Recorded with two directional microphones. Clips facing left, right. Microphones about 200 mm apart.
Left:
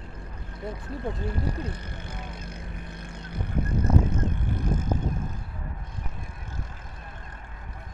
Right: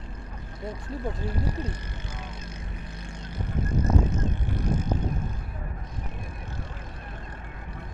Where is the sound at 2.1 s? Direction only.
55° left (ahead or behind).